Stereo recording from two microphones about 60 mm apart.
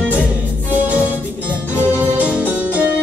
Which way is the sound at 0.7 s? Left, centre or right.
Right.